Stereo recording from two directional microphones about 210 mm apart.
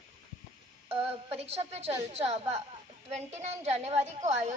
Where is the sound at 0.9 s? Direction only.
30° right (ahead or behind).